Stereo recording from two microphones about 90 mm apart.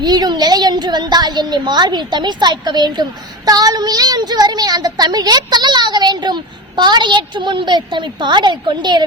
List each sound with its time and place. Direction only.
0.0 s a woman's voice: 50° right (ahead or behind)